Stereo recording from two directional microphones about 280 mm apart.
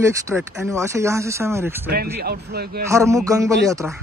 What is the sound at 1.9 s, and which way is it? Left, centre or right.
Speech, right.